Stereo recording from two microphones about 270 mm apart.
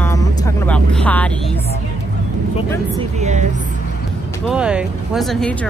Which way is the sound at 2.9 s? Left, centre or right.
Right.